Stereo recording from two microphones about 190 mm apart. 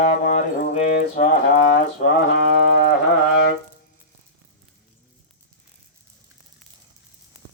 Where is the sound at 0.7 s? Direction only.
35° left (ahead or behind).